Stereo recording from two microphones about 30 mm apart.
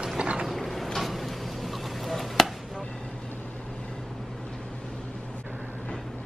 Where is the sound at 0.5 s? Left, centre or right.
Centre.